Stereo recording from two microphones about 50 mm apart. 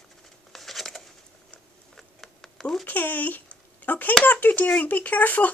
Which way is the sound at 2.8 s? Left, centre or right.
Left.